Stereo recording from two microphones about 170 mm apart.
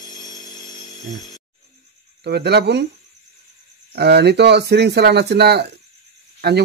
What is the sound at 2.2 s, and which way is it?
Speech, 75° right (ahead or behind).